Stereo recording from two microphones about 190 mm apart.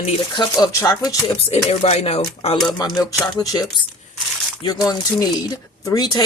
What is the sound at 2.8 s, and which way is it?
Speech, 20° left (ahead or behind).